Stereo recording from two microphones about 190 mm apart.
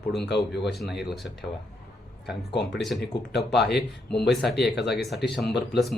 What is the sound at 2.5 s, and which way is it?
Speech, 65° left (ahead or behind).